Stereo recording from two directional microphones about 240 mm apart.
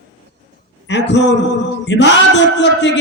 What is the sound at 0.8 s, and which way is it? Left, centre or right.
A man's voice, left.